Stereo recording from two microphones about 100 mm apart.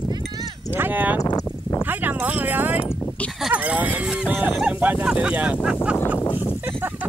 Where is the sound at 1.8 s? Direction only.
20° right (ahead or behind).